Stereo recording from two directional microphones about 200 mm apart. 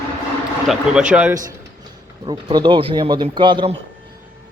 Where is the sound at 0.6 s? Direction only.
5° right (ahead or behind).